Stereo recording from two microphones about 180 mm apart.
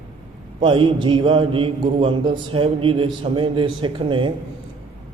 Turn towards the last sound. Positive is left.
turn(degrees=-25)  # may be behind; listen again after turning